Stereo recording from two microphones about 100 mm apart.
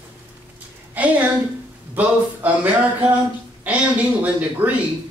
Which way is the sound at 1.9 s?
15° right (ahead or behind).